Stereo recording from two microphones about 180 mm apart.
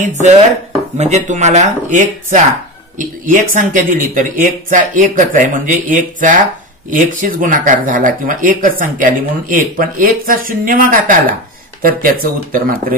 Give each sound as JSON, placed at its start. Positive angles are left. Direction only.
{"t": 0.0, "sound": "speech", "side_deg": -40}